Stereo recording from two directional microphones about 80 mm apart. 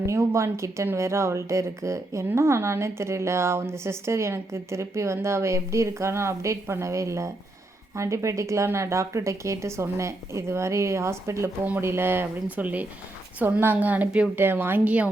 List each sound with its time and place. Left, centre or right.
0.0 s a woman's voice: right; by 15.1 s centre